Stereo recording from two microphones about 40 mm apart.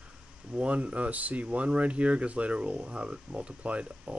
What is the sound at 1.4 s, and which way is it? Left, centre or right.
Speech, right.